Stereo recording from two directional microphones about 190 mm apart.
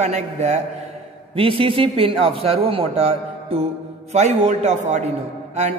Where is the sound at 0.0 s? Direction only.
35° right (ahead or behind).